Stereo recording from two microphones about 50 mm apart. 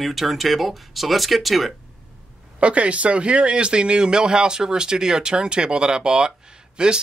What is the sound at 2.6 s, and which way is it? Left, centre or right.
Speech, right.